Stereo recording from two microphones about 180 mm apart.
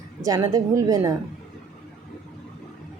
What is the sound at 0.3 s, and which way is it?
Speech, 20° right (ahead or behind).